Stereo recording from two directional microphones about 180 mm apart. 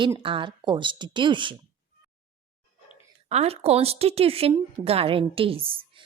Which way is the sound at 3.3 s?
35° right (ahead or behind).